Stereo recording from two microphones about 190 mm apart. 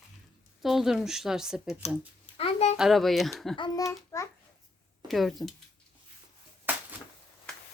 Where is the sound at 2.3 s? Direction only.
35° left (ahead or behind).